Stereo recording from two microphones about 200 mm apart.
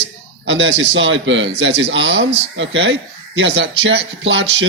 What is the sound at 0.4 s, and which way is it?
A man's voice, 65° right (ahead or behind).